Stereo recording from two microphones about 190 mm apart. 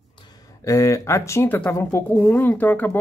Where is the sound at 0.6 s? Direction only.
15° left (ahead or behind).